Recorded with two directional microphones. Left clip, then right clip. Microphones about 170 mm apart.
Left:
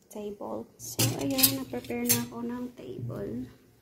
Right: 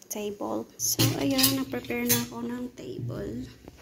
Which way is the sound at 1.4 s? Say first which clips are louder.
Right 3 dB; centre (ahead or behind).